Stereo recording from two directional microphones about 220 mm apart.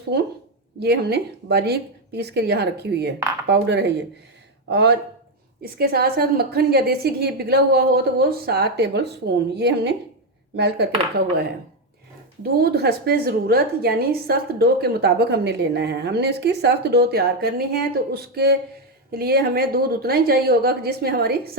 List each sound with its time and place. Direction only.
0.8 s a woman's voice: 50° right (ahead or behind)
12.4 s a woman's voice: 45° right (ahead or behind)